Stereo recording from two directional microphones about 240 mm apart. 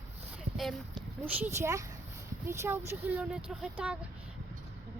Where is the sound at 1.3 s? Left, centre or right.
Centre.